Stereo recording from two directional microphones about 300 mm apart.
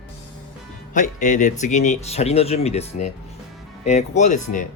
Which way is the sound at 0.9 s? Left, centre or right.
Left.